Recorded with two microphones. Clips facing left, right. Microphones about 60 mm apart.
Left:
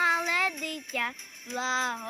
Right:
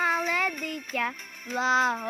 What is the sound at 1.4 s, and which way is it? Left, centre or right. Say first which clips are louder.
Music: right 6 dB; right.